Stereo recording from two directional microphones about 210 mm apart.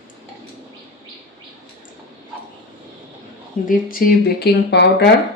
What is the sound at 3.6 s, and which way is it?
Speech, 35° left (ahead or behind).